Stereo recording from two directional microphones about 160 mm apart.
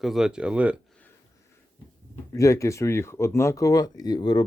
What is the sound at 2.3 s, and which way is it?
Speech, 20° left (ahead or behind).